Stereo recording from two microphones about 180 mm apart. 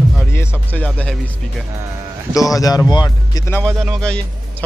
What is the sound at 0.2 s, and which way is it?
Music, 15° left (ahead or behind).